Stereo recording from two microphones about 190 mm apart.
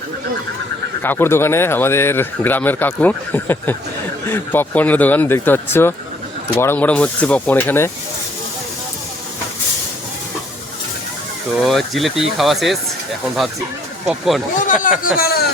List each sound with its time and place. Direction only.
1.0 s speech: 10° left (ahead or behind)
11.6 s speech: centre (ahead or behind)
14.1 s speech: centre (ahead or behind)
14.6 s speech: 45° left (ahead or behind)
15.2 s speech: 55° left (ahead or behind)